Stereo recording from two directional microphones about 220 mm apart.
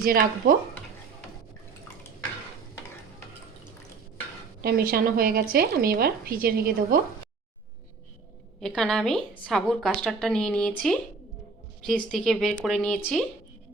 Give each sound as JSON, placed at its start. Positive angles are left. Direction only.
{"t": 0.0, "sound": "a woman's voice", "side_deg": -40}
{"t": 4.6, "sound": "a woman's voice", "side_deg": -40}
{"t": 8.6, "sound": "a woman's voice", "side_deg": 5}